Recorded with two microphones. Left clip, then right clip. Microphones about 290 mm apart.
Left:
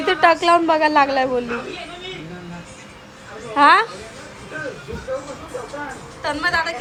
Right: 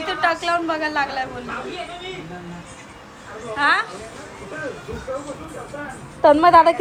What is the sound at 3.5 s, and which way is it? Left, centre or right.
Speech, left.